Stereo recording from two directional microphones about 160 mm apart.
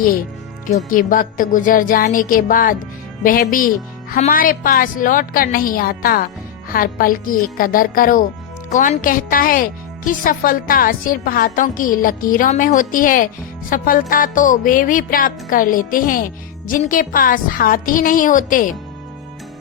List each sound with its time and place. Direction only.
0.9 s a woman's voice: 60° left (ahead or behind)